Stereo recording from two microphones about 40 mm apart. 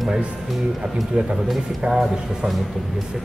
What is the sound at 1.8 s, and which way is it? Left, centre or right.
Speech, centre.